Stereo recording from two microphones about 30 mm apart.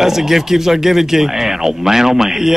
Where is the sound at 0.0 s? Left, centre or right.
Centre.